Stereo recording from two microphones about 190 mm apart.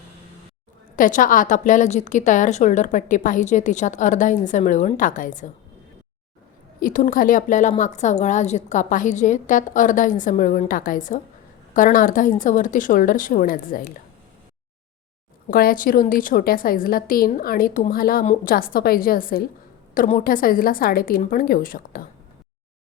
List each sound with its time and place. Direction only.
0.9 s a woman's voice: 45° left (ahead or behind)
6.7 s a woman's voice: 45° left (ahead or behind)
15.4 s a woman's voice: 50° left (ahead or behind)